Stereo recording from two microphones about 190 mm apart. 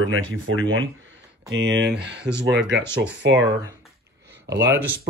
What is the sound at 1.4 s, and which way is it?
Speech, 70° right (ahead or behind).